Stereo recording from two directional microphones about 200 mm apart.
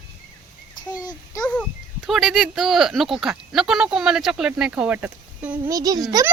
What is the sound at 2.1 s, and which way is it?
Speech, centre (ahead or behind).